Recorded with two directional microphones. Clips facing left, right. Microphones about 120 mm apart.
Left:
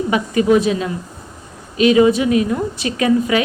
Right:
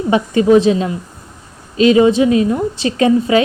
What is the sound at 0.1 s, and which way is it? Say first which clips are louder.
A woman's voice: right 5 dB; 30° right (ahead or behind).